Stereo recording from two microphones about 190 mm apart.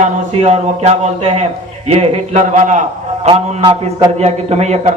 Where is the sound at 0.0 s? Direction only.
35° right (ahead or behind).